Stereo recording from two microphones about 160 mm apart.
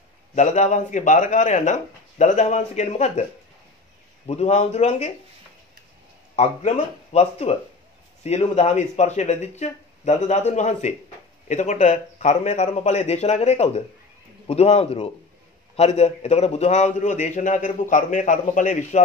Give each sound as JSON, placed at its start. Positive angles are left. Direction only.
{"t": 0.3, "sound": "a man's voice", "side_deg": 45}
{"t": 4.3, "sound": "a man's voice", "side_deg": 45}
{"t": 6.3, "sound": "a man's voice", "side_deg": 45}